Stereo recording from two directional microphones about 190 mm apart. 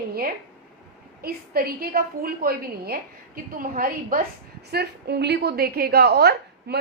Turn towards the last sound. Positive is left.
turn(degrees=-55)  # may be behind; listen again after turning